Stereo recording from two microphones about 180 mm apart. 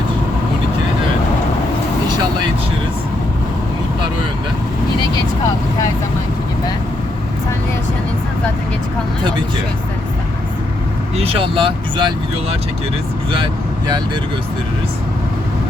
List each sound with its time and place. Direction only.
11.2 s speech: 30° right (ahead or behind)
13.3 s speech: 25° right (ahead or behind)